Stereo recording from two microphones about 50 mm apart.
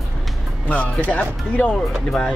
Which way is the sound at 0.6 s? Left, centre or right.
Left.